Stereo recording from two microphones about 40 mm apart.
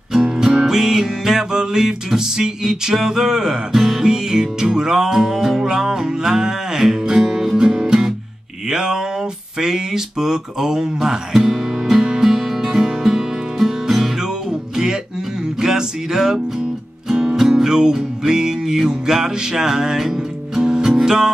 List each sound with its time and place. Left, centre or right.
0.2 s music: centre
8.6 s a sound: centre
9.6 s music: centre
15.6 s music: centre